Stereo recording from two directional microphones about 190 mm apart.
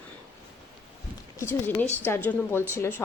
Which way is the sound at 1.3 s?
15° left (ahead or behind).